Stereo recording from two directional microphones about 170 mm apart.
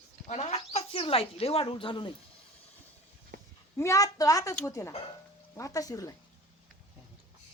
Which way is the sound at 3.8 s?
20° left (ahead or behind).